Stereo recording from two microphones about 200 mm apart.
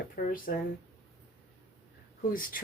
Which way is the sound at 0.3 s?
45° left (ahead or behind).